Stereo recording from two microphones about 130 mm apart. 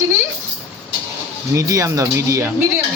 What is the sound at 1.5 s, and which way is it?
Speech, 25° right (ahead or behind).